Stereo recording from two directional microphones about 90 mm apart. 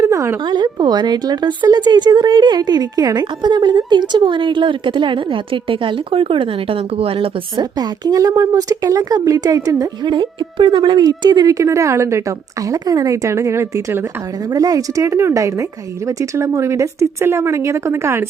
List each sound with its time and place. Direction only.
0.0 s a sound: 35° right (ahead or behind)
0.4 s speech: 55° right (ahead or behind); by 7.6 s 90° right
7.6 s speech: 45° right (ahead or behind)
10.1 s a woman's voice: 65° right (ahead or behind); by 14.0 s 30° right (ahead or behind)
14.5 s a woman's voice: 40° right (ahead or behind)